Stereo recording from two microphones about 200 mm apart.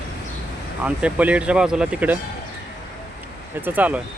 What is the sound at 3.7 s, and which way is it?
Speech, 10° right (ahead or behind).